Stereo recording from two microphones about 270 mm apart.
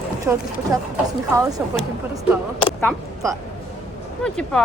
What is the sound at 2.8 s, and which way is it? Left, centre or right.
Speech, centre.